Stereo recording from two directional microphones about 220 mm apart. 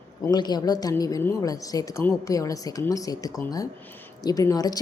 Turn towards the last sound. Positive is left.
turn(degrees=15)  # may be behind; listen again after turning